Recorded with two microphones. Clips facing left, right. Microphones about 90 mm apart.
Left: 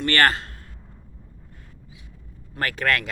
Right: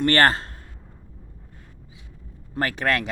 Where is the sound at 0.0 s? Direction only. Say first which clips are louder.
Right 2 dB; 35° right (ahead or behind).